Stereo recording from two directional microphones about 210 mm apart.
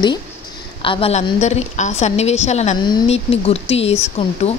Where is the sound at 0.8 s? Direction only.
25° left (ahead or behind).